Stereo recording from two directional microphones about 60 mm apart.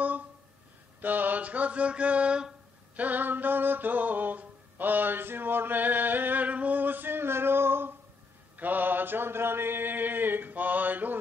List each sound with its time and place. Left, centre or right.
1.0 s mantra: right
3.0 s mantra: right
8.5 s mantra: right